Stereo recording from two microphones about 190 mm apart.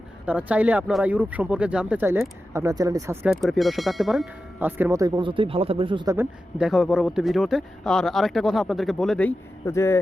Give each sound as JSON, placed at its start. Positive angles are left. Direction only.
{"t": 0.3, "sound": "speech", "side_deg": -5}
{"t": 3.2, "sound": "speech", "side_deg": 0}
{"t": 6.1, "sound": "speech", "side_deg": -5}